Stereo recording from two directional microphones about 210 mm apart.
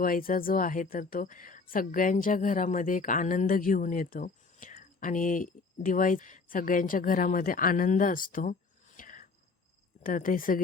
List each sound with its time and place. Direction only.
0.0 s speech: 40° left (ahead or behind)